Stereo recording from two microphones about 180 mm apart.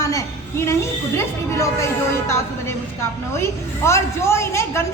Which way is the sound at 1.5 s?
15° left (ahead or behind).